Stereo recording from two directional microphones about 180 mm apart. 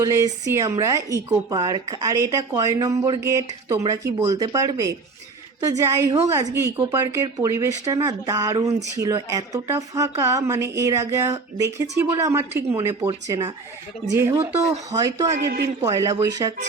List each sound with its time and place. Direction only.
0.0 s speech: 15° right (ahead or behind)
15.4 s a man's voice: 65° right (ahead or behind)
15.8 s speech: 15° right (ahead or behind)